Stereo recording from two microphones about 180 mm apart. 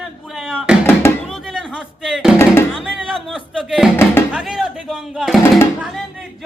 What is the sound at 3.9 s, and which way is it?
Speech, 10° left (ahead or behind).